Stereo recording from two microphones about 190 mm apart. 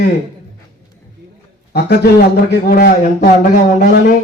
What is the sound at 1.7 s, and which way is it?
Speech, 55° left (ahead or behind).